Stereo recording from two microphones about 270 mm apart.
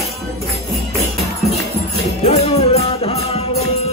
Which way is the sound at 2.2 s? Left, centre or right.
Left.